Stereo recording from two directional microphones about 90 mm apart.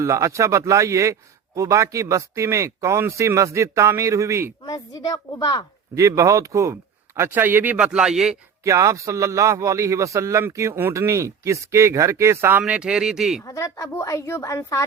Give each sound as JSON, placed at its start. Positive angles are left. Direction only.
{"t": 0.0, "sound": "speech", "side_deg": -35}
{"t": 4.6, "sound": "a woman's voice", "side_deg": 45}
{"t": 5.9, "sound": "speech", "side_deg": -35}
{"t": 7.2, "sound": "speech", "side_deg": -20}
{"t": 8.6, "sound": "speech", "side_deg": -35}
{"t": 13.4, "sound": "a woman's voice", "side_deg": 35}